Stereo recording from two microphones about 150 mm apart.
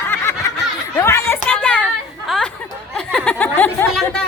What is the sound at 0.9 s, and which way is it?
Chatter, 15° left (ahead or behind).